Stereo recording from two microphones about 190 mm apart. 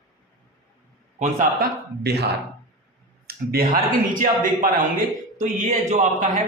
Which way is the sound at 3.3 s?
50° right (ahead or behind).